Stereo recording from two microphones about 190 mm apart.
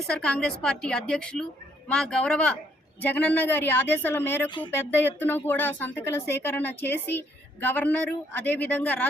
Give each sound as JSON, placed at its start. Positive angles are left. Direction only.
{"t": 0.2, "sound": "a woman's voice", "side_deg": 5}